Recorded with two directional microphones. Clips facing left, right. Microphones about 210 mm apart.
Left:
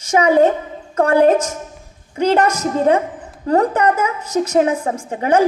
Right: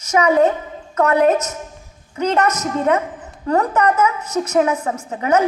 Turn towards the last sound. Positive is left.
turn(degrees=30)  # may be behind; listen again after turning